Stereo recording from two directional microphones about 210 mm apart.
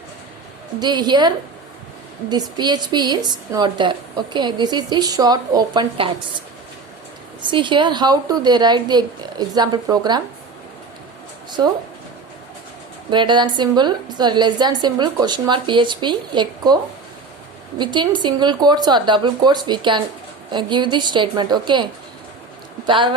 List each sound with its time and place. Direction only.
0.8 s a woman's voice: 20° right (ahead or behind)
2.3 s a woman's voice: 20° right (ahead or behind)
7.4 s a woman's voice: 25° right (ahead or behind)
13.1 s a woman's voice: 20° right (ahead or behind)
17.7 s a woman's voice: 20° right (ahead or behind)